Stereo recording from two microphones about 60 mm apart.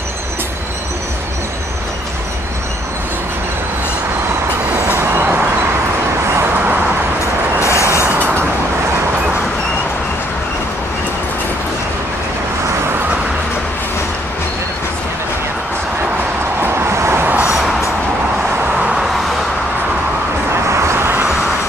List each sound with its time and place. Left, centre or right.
4.7 s train: right
6.5 s vehicle: right
7.6 s train: left
8.0 s train: right
16.6 s vehicle: right
17.6 s music: centre
18.8 s vehicle: centre
20.8 s vehicle: right